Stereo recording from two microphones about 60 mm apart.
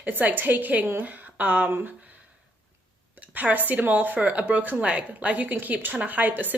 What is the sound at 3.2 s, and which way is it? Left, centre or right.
A woman's voice, right.